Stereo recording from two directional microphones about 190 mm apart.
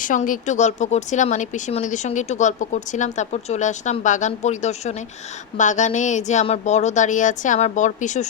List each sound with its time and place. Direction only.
0.0 s speech: 45° left (ahead or behind)